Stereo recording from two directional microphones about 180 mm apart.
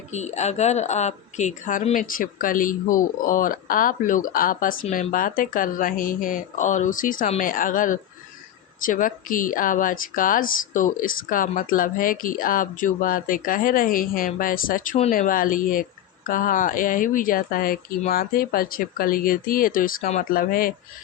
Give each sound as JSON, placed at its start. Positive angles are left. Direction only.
{"t": 0.1, "sound": "speech", "side_deg": 40}